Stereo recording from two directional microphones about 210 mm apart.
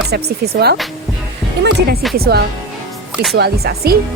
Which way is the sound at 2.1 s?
45° right (ahead or behind).